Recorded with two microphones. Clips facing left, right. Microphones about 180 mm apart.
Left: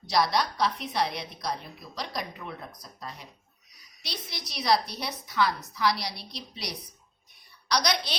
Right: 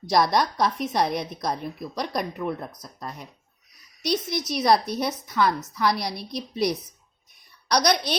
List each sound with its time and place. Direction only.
0.1 s a woman's voice: 50° right (ahead or behind)